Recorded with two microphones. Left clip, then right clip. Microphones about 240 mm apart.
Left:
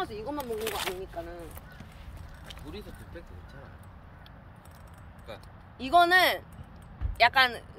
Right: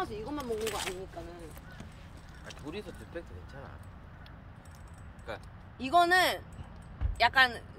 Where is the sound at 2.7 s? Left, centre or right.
Centre.